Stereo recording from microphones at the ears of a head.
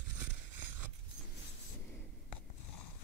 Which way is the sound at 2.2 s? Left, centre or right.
Left.